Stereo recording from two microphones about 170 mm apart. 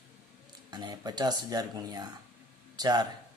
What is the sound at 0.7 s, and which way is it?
Speech, 25° right (ahead or behind).